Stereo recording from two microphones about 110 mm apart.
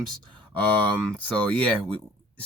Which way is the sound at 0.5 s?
15° left (ahead or behind).